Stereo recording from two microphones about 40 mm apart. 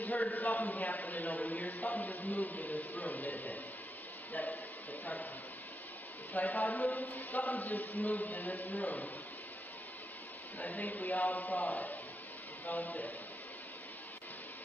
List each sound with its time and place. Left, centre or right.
0.0 s a man's voice: left
6.3 s a man's voice: left
10.6 s a man's voice: left